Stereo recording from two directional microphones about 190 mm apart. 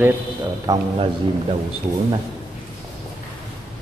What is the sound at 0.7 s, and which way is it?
Speech, 20° right (ahead or behind).